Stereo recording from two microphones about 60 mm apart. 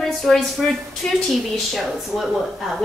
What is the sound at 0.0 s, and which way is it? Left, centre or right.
A woman's voice, centre.